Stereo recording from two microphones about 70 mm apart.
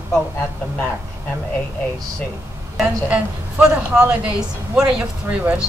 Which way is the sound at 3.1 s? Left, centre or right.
Centre.